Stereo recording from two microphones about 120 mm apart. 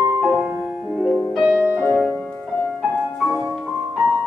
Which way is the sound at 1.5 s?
25° right (ahead or behind).